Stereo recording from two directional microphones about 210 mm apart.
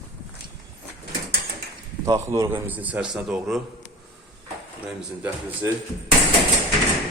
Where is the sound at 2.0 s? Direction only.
15° right (ahead or behind).